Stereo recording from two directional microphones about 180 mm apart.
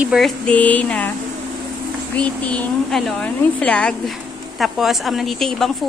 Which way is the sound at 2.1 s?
5° left (ahead or behind).